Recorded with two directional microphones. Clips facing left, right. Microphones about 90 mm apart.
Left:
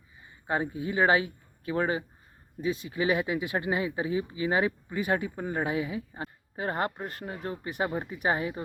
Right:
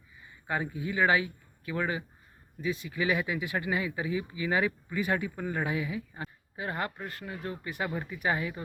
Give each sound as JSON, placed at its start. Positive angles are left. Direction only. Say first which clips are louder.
{"t": 0.4, "sound": "speech", "louder": "left 3 dB", "side_deg": 25}
{"t": 6.6, "sound": "speech", "louder": "left 4 dB", "side_deg": 35}